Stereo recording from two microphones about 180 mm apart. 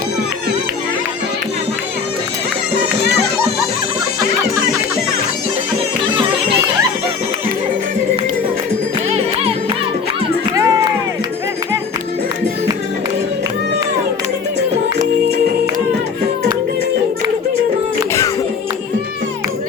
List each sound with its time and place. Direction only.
4.2 s music: 20° right (ahead or behind)
9.0 s music: 35° right (ahead or behind)
10.5 s music: 20° right (ahead or behind)